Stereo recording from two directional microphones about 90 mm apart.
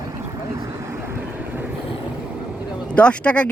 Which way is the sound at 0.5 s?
35° right (ahead or behind).